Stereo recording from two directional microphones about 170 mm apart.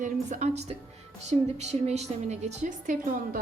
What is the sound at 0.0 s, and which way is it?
A woman's voice, 45° right (ahead or behind).